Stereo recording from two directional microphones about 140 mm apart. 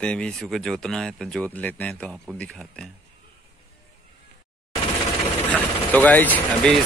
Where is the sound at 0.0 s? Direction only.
5° left (ahead or behind).